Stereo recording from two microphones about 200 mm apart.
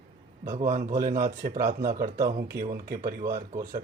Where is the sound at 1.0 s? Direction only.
45° right (ahead or behind).